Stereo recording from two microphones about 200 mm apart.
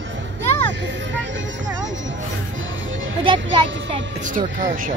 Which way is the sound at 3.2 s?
25° right (ahead or behind).